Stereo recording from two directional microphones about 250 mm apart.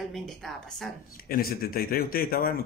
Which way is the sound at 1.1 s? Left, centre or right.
Left.